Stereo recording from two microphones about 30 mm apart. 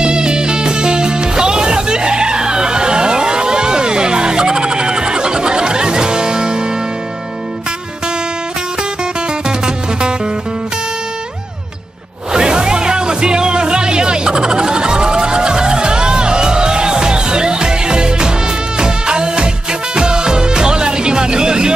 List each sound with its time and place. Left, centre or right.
0.0 s music: right
12.3 s music: right